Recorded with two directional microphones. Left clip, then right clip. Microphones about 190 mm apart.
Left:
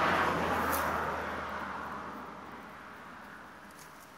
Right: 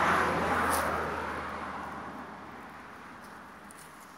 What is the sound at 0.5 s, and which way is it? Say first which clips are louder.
Vehicle: right 3 dB; 25° right (ahead or behind).